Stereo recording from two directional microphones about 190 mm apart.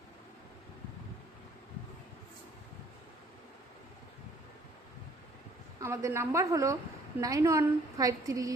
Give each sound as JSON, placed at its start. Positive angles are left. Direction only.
{"t": 5.8, "sound": "a woman's voice", "side_deg": -15}